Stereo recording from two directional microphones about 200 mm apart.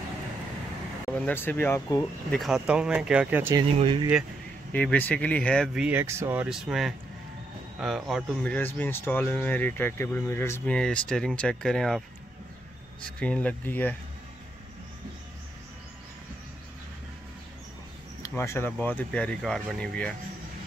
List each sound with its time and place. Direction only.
1.1 s speech: 10° left (ahead or behind)
2.3 s speech: centre (ahead or behind)
3.5 s speech: 25° right (ahead or behind)
4.7 s speech: 10° left (ahead or behind)
5.9 s speech: 10° right (ahead or behind)
13.2 s speech: 5° left (ahead or behind)
18.2 s speech: 15° left (ahead or behind)